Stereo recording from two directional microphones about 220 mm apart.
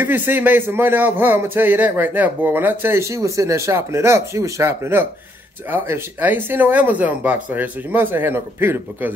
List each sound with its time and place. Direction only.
0.0 s a man's voice: 10° right (ahead or behind)